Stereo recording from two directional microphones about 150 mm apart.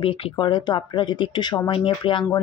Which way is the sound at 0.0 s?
35° left (ahead or behind).